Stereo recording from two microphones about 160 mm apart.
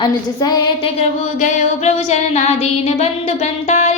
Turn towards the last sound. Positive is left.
turn(degrees=45)  # may be behind; listen again after turning